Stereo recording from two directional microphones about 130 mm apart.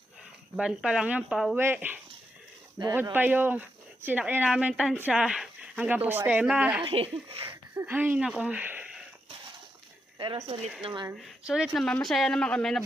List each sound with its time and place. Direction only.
0.6 s speech: 5° right (ahead or behind)
6.8 s speech: 45° right (ahead or behind)
7.7 s speech: 15° right (ahead or behind)
10.1 s a sound: 35° right (ahead or behind)
10.4 s speech: 50° right (ahead or behind)
10.8 s speech: 35° right (ahead or behind)
11.1 s speech: 5° right (ahead or behind)